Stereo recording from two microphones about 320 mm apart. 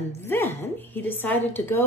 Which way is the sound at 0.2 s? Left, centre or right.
Centre.